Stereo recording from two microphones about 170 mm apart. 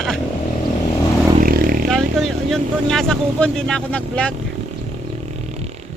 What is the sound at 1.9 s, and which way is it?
Speech, centre (ahead or behind).